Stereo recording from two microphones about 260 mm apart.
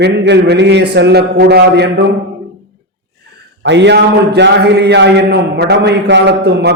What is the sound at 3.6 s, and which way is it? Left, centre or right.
A man's voice, right.